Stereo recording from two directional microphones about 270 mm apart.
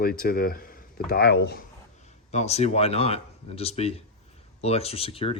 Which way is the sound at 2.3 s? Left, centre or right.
Left.